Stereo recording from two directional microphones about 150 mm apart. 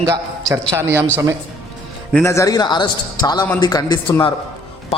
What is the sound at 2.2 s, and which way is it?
A man's voice, 20° left (ahead or behind).